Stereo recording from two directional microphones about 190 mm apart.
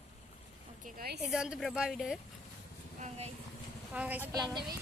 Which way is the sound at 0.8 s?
50° right (ahead or behind).